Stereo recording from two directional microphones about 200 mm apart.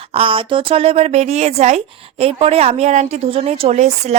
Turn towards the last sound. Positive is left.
turn(degrees=-35)  # may be behind; listen again after turning